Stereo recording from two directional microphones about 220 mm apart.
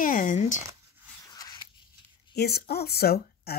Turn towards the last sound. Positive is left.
turn(degrees=45)  # may be behind; listen again after turning